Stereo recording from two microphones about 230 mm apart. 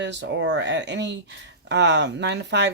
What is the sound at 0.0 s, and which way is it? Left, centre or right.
Speech, right.